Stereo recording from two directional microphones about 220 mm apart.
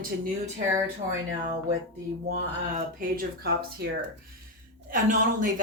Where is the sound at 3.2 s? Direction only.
45° right (ahead or behind).